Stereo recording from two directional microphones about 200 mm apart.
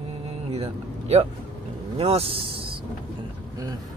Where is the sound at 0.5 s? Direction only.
30° right (ahead or behind).